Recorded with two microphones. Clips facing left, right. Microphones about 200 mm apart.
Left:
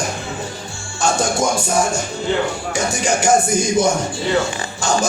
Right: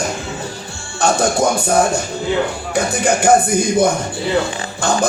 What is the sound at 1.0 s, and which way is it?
Speech, 60° right (ahead or behind).